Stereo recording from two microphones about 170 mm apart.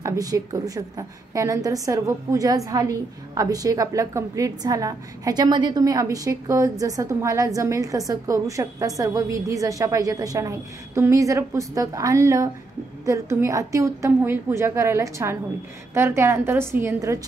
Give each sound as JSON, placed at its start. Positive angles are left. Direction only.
{"t": 0.0, "sound": "a woman's voice", "side_deg": -20}